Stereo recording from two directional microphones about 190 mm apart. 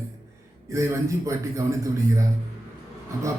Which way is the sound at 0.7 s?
15° right (ahead or behind).